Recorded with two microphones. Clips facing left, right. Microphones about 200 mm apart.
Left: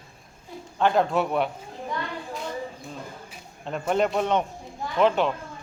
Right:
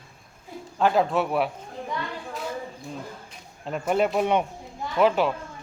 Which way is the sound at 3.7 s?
5° right (ahead or behind).